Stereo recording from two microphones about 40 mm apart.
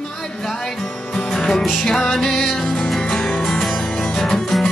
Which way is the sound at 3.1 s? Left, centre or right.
Centre.